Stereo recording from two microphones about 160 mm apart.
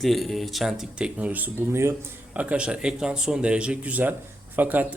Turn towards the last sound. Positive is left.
turn(degrees=-10)  # may be behind; listen again after turning